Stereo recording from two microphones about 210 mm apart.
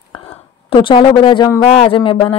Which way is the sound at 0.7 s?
25° left (ahead or behind).